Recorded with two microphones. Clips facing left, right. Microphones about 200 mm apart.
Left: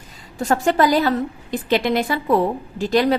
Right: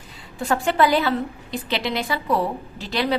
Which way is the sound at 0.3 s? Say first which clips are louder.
Left 3 dB; 40° left (ahead or behind).